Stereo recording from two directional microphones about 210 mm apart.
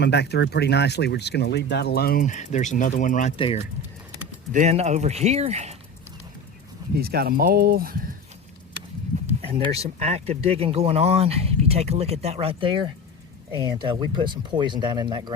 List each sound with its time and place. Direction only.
0.0 s speech: 55° left (ahead or behind); by 3.3 s 35° left (ahead or behind)
3.3 s speech: 25° left (ahead or behind)
4.5 s speech: 30° right (ahead or behind)
6.9 s speech: 45° right (ahead or behind)
9.4 s speech: 25° right (ahead or behind)